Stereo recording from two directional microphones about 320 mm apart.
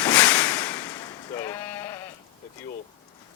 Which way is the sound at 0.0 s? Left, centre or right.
Centre.